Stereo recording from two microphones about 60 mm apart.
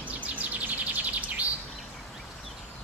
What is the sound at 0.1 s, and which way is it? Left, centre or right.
Chirp, right.